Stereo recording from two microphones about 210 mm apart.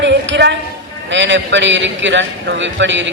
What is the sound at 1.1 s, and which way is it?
A man's voice, 60° right (ahead or behind).